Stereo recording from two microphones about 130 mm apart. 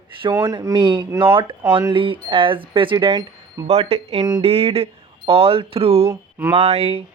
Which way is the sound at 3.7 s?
50° right (ahead or behind).